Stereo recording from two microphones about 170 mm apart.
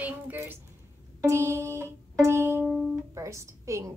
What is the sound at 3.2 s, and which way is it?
Speech, 15° right (ahead or behind).